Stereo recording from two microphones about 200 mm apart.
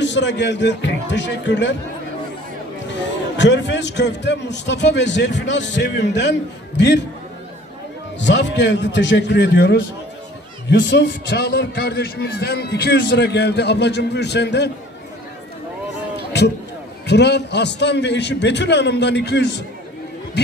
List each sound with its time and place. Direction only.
0.0 s a man's voice: 60° left (ahead or behind)
2.9 s a man's voice: 60° left (ahead or behind)
8.2 s a man's voice: 60° left (ahead or behind)
17.0 s a man's voice: 60° left (ahead or behind)